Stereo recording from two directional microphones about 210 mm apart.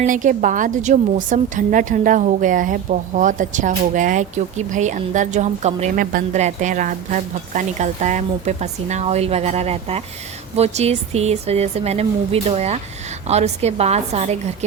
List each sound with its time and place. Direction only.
0.0 s a woman's voice: 35° right (ahead or behind)